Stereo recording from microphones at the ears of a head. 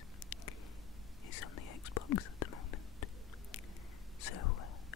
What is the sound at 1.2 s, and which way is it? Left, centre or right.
Whispering, left.